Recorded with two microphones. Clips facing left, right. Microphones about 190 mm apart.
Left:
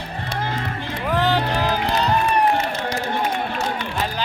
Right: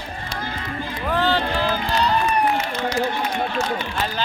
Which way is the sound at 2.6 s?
50° left (ahead or behind).